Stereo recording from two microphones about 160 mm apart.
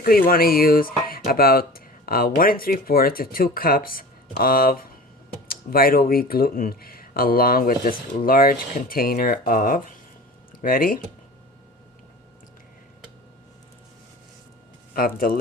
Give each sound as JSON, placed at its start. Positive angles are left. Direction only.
{"t": 0.0, "sound": "speech", "side_deg": 65}
{"t": 14.9, "sound": "speech", "side_deg": 65}